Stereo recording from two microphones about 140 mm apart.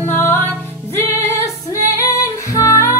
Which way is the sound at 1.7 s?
20° left (ahead or behind).